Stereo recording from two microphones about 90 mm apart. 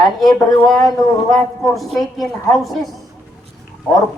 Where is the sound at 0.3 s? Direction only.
5° left (ahead or behind).